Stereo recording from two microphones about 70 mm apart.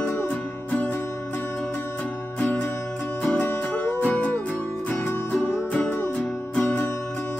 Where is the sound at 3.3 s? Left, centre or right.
Left.